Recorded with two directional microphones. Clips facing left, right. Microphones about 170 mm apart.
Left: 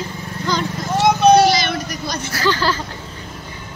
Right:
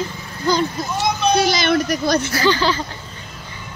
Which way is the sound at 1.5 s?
55° right (ahead or behind).